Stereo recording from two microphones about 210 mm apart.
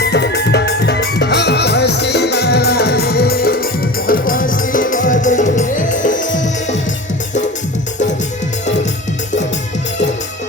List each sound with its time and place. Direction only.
0.0 s music: 50° left (ahead or behind); by 6.7 s 35° left (ahead or behind)